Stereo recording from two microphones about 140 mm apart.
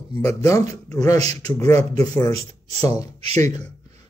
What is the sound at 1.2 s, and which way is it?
Speech, 50° right (ahead or behind).